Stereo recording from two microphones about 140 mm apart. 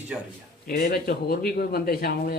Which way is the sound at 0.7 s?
90° left.